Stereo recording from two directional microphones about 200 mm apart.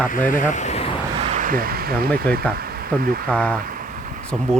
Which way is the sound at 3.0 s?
45° right (ahead or behind).